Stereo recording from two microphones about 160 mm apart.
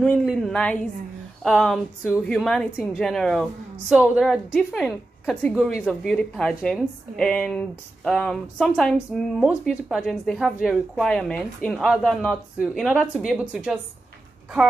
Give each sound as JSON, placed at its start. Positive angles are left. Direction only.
{"t": 0.0, "sound": "speech", "side_deg": 5}